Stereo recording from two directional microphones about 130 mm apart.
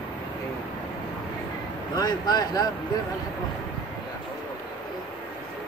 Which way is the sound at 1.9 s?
30° left (ahead or behind).